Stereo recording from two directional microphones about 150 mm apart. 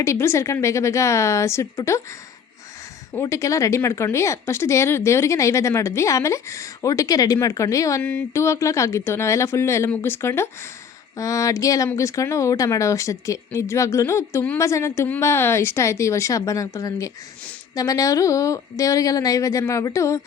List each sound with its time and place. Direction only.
0.0 s speech: 20° left (ahead or behind)
3.1 s speech: 20° left (ahead or behind)